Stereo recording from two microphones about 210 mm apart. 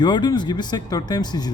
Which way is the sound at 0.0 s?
20° left (ahead or behind).